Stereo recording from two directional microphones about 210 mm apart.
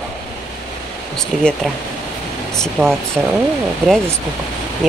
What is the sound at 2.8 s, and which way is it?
Speech, 5° left (ahead or behind).